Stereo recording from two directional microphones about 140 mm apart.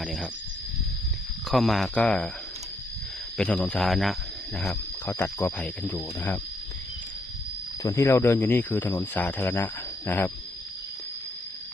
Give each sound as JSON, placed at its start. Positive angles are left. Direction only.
{"t": 0.0, "sound": "speech", "side_deg": 0}
{"t": 1.5, "sound": "speech", "side_deg": 0}
{"t": 3.3, "sound": "speech", "side_deg": 5}
{"t": 5.0, "sound": "speech", "side_deg": 15}
{"t": 7.8, "sound": "speech", "side_deg": 20}